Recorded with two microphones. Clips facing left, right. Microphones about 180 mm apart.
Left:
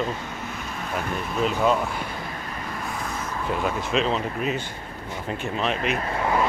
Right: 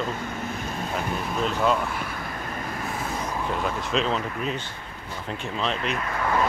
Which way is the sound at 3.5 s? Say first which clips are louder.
Left 4 dB; 5° left (ahead or behind).